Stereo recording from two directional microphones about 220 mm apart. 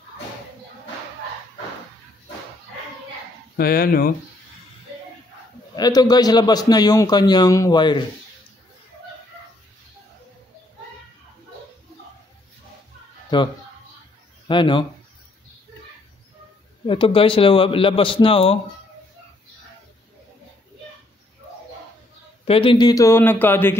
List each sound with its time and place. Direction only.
3.5 s speech: 45° left (ahead or behind)
5.8 s a man's voice: 15° left (ahead or behind)
13.3 s speech: 20° left (ahead or behind)
14.5 s speech: 20° left (ahead or behind)
16.8 s speech: 25° left (ahead or behind)
22.4 s a man's voice: 25° left (ahead or behind); by 23.8 s 10° left (ahead or behind)